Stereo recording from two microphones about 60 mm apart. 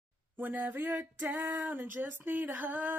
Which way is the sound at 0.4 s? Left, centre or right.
Right.